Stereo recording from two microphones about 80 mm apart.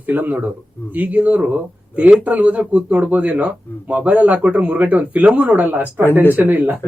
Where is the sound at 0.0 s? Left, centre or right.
Right.